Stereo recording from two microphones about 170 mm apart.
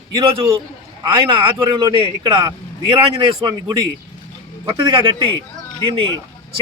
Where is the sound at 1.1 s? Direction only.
30° right (ahead or behind).